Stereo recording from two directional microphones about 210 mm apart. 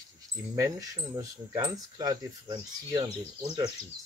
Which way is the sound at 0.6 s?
15° right (ahead or behind).